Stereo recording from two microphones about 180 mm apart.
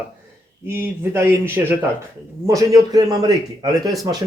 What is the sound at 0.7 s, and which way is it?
A man's voice, 15° right (ahead or behind).